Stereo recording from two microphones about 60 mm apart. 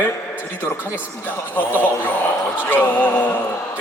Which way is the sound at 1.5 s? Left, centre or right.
Left.